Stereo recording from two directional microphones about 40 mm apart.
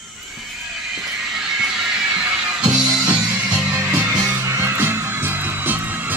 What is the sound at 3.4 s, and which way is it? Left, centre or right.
Music, right.